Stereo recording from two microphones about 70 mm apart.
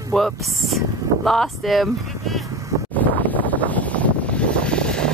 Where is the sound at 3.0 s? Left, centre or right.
Left.